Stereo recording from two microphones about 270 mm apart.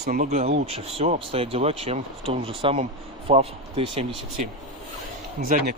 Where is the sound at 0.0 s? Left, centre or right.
Right.